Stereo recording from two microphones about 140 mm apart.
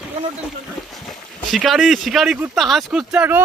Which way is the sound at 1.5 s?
Centre (ahead or behind).